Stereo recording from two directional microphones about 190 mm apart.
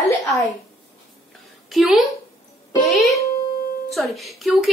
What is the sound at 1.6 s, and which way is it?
Speech, centre (ahead or behind).